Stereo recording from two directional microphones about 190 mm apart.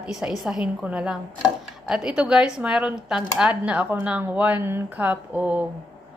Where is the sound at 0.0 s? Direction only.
5° right (ahead or behind).